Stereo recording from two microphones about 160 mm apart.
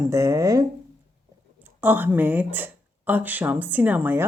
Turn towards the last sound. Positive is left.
turn(degrees=-10)  # may be behind; listen again after turning